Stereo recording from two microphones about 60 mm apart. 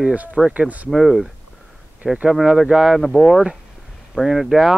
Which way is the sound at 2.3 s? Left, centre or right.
Centre.